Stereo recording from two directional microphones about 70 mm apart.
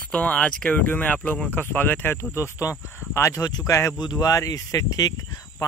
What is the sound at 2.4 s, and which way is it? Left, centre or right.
Speech, left.